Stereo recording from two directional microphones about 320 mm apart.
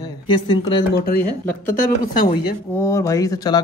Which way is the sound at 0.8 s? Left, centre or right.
Left.